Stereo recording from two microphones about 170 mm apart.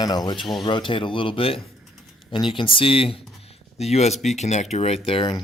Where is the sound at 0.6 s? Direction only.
30° left (ahead or behind).